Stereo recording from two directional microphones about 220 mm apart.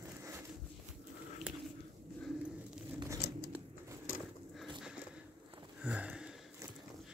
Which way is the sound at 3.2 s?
45° left (ahead or behind).